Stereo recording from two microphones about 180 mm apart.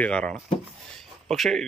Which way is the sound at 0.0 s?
5° left (ahead or behind).